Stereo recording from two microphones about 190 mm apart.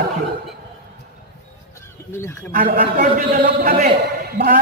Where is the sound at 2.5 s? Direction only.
45° right (ahead or behind).